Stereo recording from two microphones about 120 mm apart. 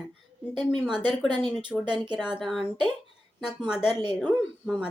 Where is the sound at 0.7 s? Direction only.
5° right (ahead or behind).